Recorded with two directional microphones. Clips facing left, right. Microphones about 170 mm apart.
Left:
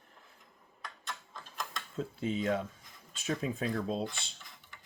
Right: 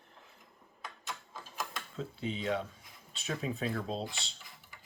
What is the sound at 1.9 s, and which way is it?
Speech, 45° left (ahead or behind).